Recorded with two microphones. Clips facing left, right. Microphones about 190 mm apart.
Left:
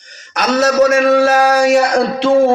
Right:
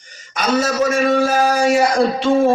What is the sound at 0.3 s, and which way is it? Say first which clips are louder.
A man's voice: left 5 dB; 70° left (ahead or behind).